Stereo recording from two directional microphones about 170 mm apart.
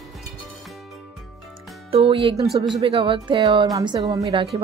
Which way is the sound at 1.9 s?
30° right (ahead or behind).